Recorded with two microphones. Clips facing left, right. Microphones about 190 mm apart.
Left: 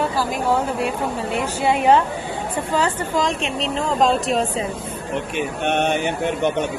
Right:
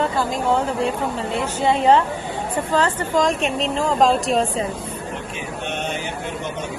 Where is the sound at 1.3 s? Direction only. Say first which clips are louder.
Even; 10° left (ahead or behind).